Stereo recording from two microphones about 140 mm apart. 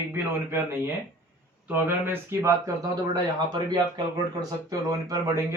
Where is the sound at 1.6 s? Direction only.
15° right (ahead or behind).